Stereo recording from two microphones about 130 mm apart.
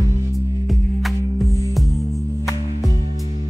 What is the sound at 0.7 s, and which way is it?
Music, centre (ahead or behind).